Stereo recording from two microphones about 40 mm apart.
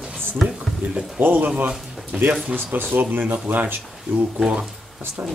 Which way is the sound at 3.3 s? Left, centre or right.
Right.